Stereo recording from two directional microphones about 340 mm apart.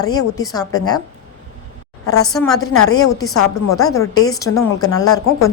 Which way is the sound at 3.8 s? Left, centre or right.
Centre.